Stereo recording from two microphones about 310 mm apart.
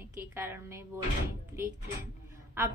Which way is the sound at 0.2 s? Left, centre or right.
Centre.